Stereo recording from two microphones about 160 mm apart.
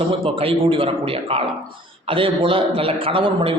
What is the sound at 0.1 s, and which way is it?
A man's voice, 35° right (ahead or behind).